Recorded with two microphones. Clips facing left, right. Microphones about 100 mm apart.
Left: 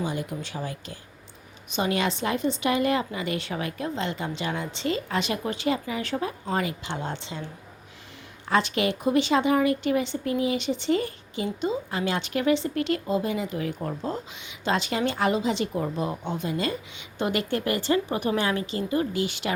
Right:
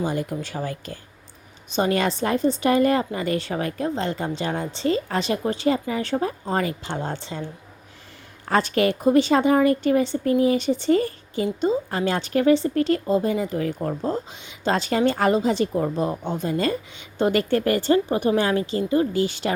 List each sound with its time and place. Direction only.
0.0 s speech: 45° right (ahead or behind)
8.4 s speech: 45° right (ahead or behind)